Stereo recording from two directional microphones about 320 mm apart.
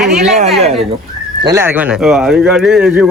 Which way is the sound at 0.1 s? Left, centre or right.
Right.